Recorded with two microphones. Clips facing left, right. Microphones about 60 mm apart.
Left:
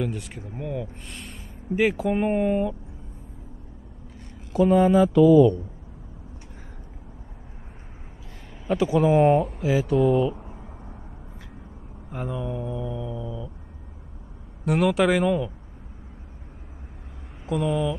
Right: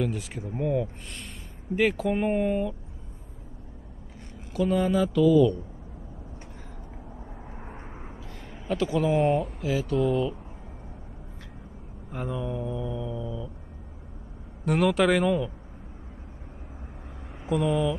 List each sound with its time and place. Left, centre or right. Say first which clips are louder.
0.0 s speech: even; centre
4.6 s speech: left 6 dB; left
8.6 s speech: left 5 dB; centre
12.1 s speech: left 1 dB; centre
14.6 s speech: left 2 dB; centre
17.5 s speech: even; centre